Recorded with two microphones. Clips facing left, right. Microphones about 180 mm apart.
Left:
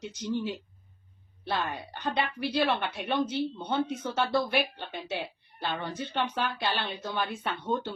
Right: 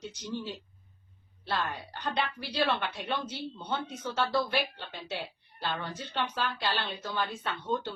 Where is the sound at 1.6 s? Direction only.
15° left (ahead or behind).